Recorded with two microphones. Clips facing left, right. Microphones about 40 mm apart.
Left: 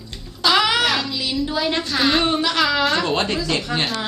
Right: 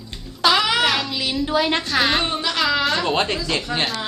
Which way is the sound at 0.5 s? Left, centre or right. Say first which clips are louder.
Left 3 dB; centre.